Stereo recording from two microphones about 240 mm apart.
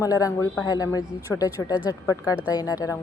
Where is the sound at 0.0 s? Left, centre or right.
Centre.